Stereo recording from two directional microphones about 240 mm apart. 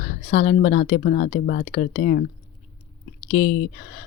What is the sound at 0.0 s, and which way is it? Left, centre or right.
Speech, left.